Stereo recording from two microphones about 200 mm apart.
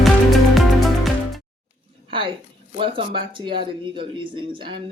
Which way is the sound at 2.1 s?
25° right (ahead or behind).